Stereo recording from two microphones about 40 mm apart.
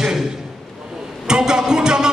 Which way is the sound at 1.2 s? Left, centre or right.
Centre.